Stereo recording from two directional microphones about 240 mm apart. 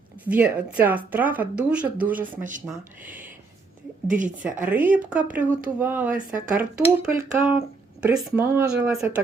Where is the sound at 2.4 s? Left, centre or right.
Right.